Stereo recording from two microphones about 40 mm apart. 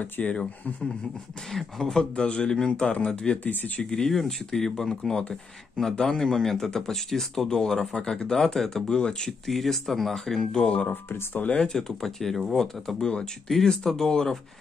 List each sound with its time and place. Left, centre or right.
0.2 s a man's voice: left
1.6 s speech: centre
2.0 s a man's voice: left
3.4 s speech: left
3.9 s speech: centre
8.8 s a man's voice: left
9.5 s speech: centre
10.7 s speech: left
11.7 s speech: centre